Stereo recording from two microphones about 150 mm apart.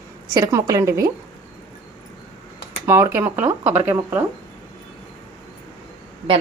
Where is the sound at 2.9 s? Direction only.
15° right (ahead or behind).